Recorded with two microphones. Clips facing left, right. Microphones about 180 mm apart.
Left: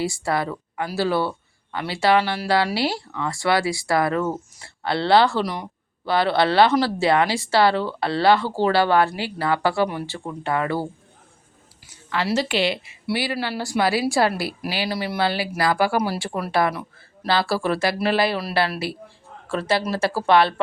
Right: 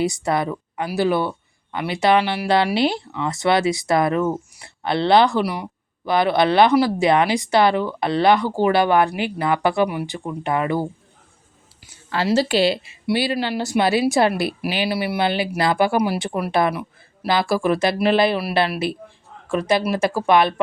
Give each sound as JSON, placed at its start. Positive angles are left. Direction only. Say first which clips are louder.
{"t": 0.0, "sound": "speech", "louder": "right 3 dB", "side_deg": -20}
{"t": 12.1, "sound": "a woman's voice", "louder": "right 4 dB", "side_deg": -30}